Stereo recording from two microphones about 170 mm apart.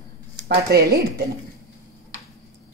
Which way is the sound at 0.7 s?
65° right (ahead or behind).